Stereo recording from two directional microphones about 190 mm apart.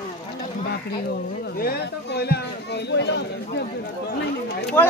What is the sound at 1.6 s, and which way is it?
Speech, 55° left (ahead or behind).